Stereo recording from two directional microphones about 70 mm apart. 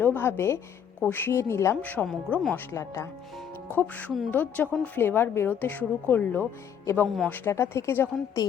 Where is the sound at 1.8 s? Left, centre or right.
Left.